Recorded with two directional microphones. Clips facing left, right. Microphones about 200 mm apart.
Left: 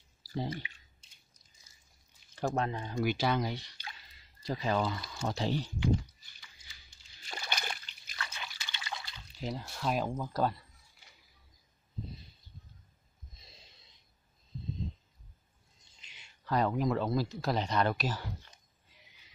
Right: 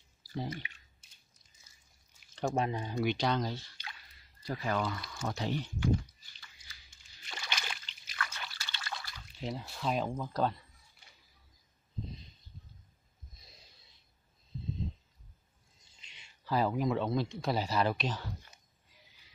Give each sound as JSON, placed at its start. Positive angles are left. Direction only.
{"t": 0.3, "sound": "speech", "side_deg": 30}
{"t": 2.5, "sound": "speech", "side_deg": -15}
{"t": 3.1, "sound": "speech", "side_deg": 5}
{"t": 7.2, "sound": "splash", "side_deg": 40}
{"t": 8.2, "sound": "liquid", "side_deg": 20}
{"t": 9.4, "sound": "speech", "side_deg": 0}
{"t": 15.8, "sound": "speech", "side_deg": 0}